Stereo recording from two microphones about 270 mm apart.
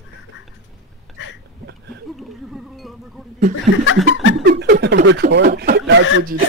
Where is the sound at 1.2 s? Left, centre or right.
Left.